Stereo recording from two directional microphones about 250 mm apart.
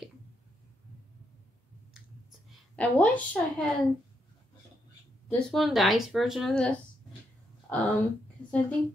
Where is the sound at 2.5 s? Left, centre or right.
Centre.